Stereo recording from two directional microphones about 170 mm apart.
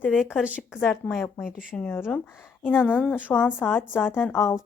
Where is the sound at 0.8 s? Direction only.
5° left (ahead or behind).